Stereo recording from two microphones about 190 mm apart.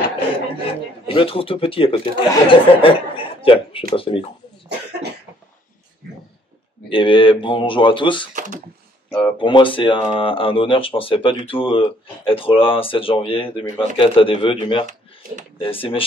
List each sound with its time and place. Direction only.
1.0 s speech: 30° left (ahead or behind)
6.9 s speech: 25° left (ahead or behind)
9.4 s speech: 25° left (ahead or behind)